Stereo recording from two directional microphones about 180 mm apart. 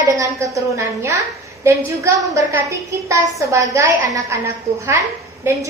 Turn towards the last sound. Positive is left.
turn(degrees=-15)  # may be behind; listen again after turning